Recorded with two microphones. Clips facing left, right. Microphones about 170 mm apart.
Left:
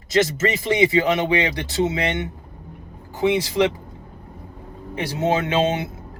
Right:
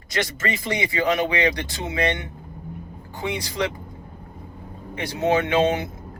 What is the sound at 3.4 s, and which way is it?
Speech, 25° left (ahead or behind).